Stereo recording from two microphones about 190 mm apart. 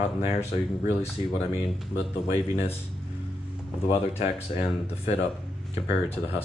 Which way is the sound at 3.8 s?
30° left (ahead or behind).